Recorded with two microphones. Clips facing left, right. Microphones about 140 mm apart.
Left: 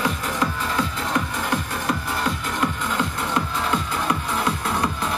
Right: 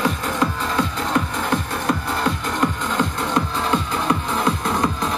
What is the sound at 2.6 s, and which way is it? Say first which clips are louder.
Music: right 3 dB; 35° right (ahead or behind).